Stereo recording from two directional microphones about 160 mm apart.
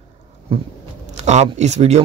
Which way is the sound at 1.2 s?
45° right (ahead or behind).